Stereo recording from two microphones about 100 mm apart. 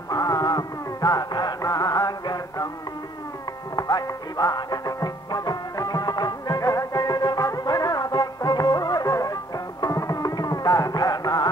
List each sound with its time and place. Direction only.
0.1 s music: 40° left (ahead or behind)
3.7 s music: 40° left (ahead or behind)